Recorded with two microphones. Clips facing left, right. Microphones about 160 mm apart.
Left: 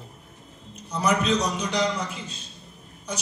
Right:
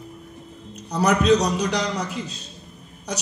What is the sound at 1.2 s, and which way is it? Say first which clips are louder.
Speech: right 6 dB; 40° right (ahead or behind).